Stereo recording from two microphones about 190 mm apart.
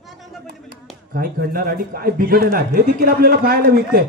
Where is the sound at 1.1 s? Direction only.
50° right (ahead or behind).